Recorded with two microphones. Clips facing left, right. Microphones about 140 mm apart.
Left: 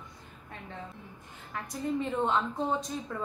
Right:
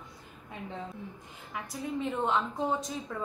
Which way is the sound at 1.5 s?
5° right (ahead or behind).